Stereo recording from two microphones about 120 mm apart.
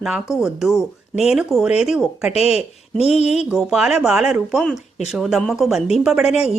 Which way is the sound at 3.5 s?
5° right (ahead or behind).